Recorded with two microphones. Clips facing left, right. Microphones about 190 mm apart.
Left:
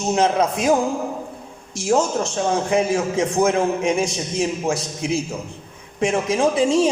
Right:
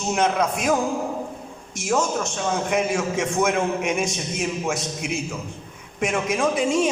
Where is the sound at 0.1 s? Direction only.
30° left (ahead or behind).